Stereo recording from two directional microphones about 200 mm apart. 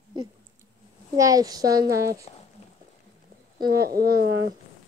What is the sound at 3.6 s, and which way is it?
Speech, 20° right (ahead or behind).